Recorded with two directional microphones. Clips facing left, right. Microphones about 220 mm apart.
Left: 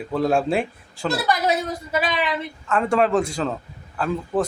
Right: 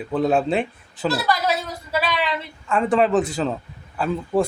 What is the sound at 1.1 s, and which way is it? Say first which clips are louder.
Speech: left 2 dB; 20° left (ahead or behind).